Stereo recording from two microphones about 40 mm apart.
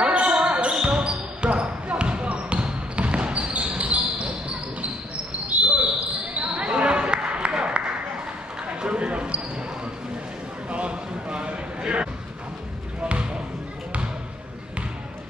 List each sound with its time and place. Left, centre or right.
0.0 s basketball bounce: right
6.6 s basketball bounce: right
7.8 s a sound: right
8.6 s run: right
10.7 s a sound: right
13.0 s basketball bounce: right